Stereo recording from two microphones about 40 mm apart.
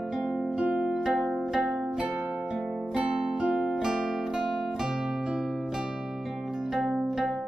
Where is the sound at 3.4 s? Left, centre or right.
Right.